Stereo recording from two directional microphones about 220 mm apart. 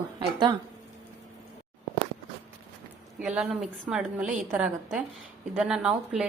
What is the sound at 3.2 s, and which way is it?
A woman's voice, 5° right (ahead or behind).